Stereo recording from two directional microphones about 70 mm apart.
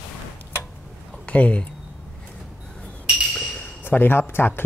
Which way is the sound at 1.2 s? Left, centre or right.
Centre.